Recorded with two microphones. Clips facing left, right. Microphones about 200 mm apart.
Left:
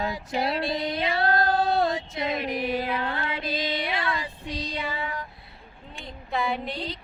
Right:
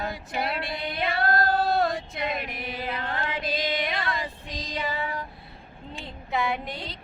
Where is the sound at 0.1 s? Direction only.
55° right (ahead or behind).